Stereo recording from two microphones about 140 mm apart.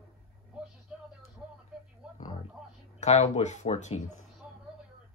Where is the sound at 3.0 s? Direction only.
55° left (ahead or behind).